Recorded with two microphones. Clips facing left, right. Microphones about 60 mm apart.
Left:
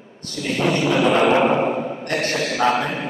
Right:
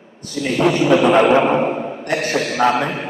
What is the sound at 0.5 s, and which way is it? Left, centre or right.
Speech, centre.